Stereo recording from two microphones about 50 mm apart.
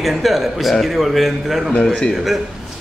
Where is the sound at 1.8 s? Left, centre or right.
Centre.